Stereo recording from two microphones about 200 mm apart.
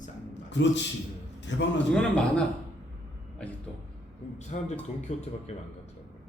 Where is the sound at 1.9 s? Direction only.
5° left (ahead or behind).